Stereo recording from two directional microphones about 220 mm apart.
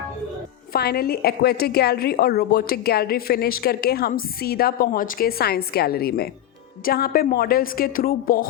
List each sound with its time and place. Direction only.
0.7 s a woman's voice: 45° left (ahead or behind)